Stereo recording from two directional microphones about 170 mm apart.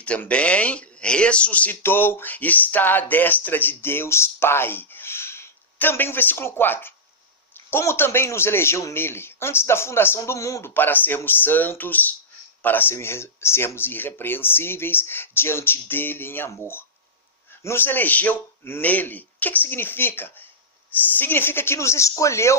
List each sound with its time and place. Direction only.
0.0 s speech: 5° left (ahead or behind)